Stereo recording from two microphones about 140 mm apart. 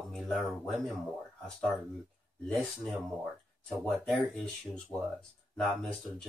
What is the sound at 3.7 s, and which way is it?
Speech, centre (ahead or behind).